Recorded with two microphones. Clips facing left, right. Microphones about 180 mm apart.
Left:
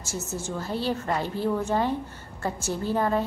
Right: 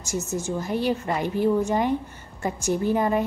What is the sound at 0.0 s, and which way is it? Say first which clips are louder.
A woman's voice: right 5 dB; 15° right (ahead or behind).